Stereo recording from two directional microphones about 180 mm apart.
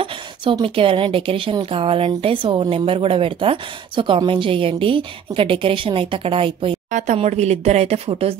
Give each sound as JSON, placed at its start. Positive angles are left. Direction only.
{"t": 0.0, "sound": "a woman's voice", "side_deg": -30}
{"t": 6.9, "sound": "a woman's voice", "side_deg": -45}